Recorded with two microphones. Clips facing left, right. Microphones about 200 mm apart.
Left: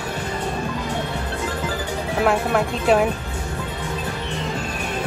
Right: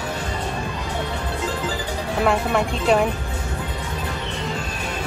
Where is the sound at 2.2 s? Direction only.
Centre (ahead or behind).